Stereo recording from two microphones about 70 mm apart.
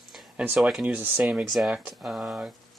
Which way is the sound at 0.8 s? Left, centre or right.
Right.